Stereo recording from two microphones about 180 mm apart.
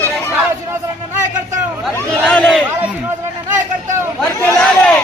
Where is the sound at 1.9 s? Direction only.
10° left (ahead or behind).